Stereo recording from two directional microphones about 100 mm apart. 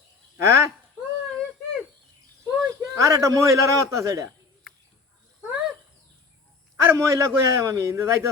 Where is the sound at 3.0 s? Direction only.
30° right (ahead or behind).